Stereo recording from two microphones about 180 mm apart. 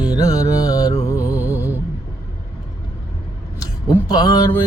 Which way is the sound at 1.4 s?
10° right (ahead or behind).